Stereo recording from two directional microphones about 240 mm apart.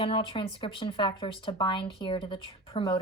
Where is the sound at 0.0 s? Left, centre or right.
Left.